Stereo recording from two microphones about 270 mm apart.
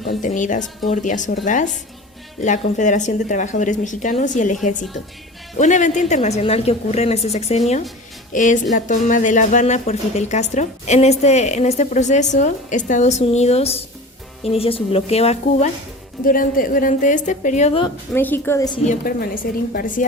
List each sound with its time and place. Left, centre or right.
0.0 s speech: left
18.1 s a woman's voice: centre
18.9 s a woman's voice: left